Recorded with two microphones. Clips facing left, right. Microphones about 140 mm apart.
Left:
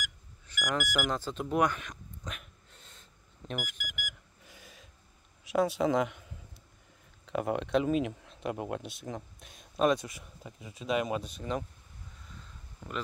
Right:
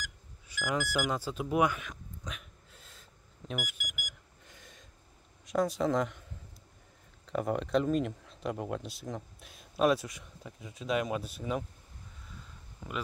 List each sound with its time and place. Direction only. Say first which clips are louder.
0.5 s speech: even; 10° right (ahead or behind)
3.8 s alarm clock: left 3 dB; 45° right (ahead or behind)
4.5 s gasp: left 2 dB; 5° left (ahead or behind)
5.4 s a man's voice: left 2 dB; 5° left (ahead or behind)
7.2 s speech: even; 5° left (ahead or behind)
12.8 s speech: even; 10° right (ahead or behind)